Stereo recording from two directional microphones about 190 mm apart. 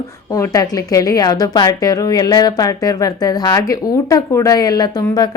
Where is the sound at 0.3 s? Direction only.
15° left (ahead or behind).